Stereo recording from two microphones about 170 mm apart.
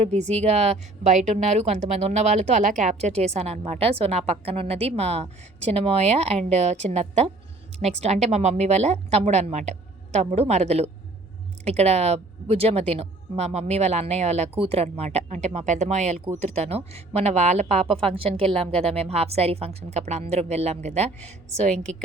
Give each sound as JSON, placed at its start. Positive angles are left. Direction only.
{"t": 0.0, "sound": "speech", "side_deg": -40}